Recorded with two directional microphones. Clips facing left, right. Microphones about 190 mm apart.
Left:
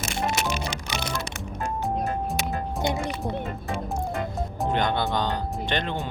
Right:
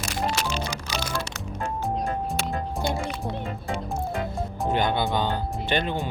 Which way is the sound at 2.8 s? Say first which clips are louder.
Left 2 dB; 20° left (ahead or behind).